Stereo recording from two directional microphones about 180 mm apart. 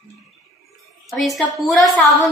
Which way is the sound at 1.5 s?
Centre (ahead or behind).